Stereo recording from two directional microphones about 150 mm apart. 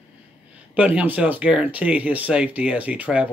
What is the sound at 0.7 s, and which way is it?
Speech, 10° right (ahead or behind).